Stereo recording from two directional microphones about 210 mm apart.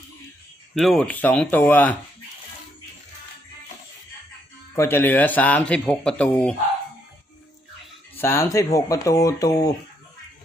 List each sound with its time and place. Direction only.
0.8 s speech: centre (ahead or behind)
4.7 s speech: 10° left (ahead or behind)
8.1 s speech: 10° left (ahead or behind)